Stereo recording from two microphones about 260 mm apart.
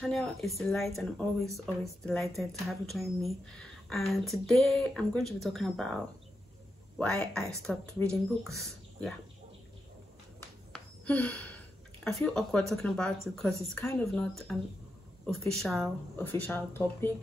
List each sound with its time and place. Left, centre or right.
0.0 s speech: centre
7.0 s speech: centre
10.7 s a sound: centre
12.0 s speech: centre